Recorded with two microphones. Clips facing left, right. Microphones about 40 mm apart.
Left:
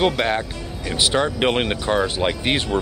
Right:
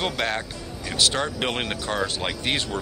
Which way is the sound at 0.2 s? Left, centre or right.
Left.